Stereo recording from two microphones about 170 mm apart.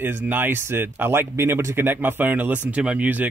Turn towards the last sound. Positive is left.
turn(degrees=-10)  # may be behind; listen again after turning